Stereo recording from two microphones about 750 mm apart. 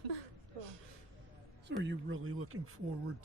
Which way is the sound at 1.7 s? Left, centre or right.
Centre.